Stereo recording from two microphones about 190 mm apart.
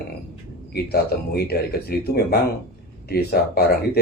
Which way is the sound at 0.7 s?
55° left (ahead or behind).